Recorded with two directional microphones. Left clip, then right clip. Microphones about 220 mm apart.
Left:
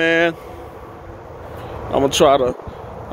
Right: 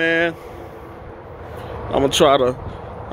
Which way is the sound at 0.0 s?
15° left (ahead or behind).